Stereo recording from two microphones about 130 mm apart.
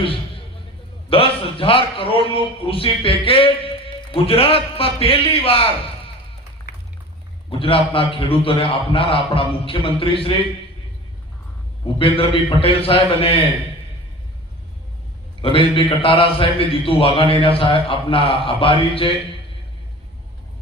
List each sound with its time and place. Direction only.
0.0 s a sound: 45° left (ahead or behind)
1.1 s a man's voice: 45° left (ahead or behind)
7.6 s a man's voice: 45° left (ahead or behind)
11.9 s a man's voice: 45° left (ahead or behind)
15.4 s a man's voice: 40° left (ahead or behind)